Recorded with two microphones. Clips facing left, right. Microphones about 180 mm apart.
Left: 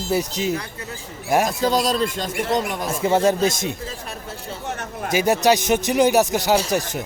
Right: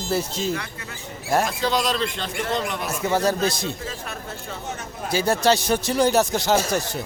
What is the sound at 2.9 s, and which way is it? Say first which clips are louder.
Speech: left 4 dB; 25° left (ahead or behind).